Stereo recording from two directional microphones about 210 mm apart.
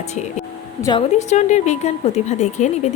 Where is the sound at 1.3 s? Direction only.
35° left (ahead or behind).